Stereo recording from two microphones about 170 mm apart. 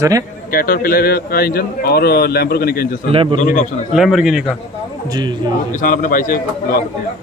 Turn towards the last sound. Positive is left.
turn(degrees=55)  # may be behind; listen again after turning